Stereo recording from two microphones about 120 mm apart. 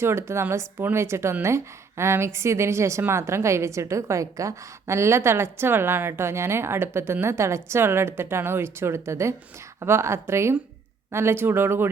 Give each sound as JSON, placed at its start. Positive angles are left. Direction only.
{"t": 0.0, "sound": "a woman's voice", "side_deg": -20}